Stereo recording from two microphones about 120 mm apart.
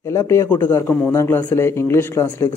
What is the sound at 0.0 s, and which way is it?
Speech, 25° left (ahead or behind).